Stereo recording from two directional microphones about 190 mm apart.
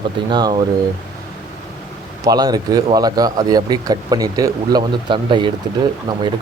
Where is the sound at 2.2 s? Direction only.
20° right (ahead or behind).